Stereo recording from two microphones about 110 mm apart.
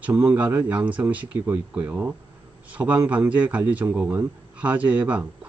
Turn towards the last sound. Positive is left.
turn(degrees=-15)  # may be behind; listen again after turning